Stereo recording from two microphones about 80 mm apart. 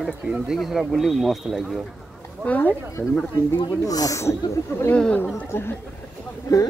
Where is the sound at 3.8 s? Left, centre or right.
Left.